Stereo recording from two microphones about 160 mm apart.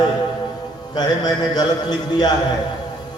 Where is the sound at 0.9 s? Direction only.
25° left (ahead or behind).